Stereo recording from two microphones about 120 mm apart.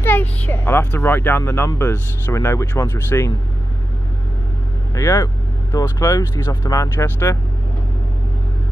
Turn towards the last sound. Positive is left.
turn(degrees=20)  # may be behind; listen again after turning